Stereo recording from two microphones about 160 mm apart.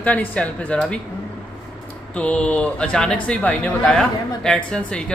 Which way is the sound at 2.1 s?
5° left (ahead or behind).